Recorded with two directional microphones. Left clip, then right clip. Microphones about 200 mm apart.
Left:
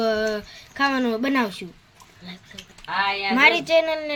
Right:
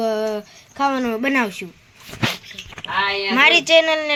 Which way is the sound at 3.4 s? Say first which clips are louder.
Right 4 dB; centre (ahead or behind).